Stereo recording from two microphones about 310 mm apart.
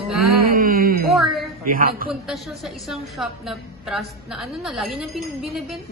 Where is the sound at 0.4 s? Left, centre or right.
Right.